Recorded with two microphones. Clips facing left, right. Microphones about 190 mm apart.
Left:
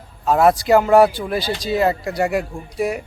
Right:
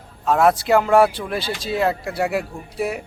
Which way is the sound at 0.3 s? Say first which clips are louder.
Left 2 dB; centre (ahead or behind).